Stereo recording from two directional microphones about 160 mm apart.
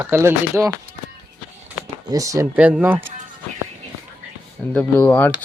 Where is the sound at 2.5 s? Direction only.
10° right (ahead or behind).